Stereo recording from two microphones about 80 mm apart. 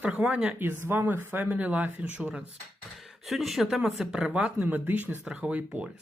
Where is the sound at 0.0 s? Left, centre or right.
Centre.